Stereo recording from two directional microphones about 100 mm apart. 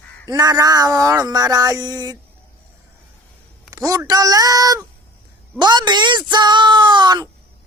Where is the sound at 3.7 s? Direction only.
35° right (ahead or behind).